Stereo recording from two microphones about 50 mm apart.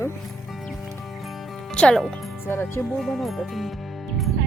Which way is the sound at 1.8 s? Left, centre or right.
Centre.